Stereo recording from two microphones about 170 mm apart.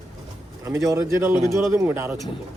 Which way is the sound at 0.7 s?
15° right (ahead or behind).